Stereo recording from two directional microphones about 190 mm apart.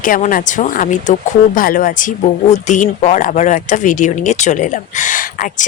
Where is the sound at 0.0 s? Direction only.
45° left (ahead or behind).